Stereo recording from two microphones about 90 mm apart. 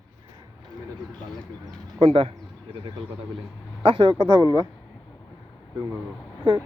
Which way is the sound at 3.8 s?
70° right (ahead or behind).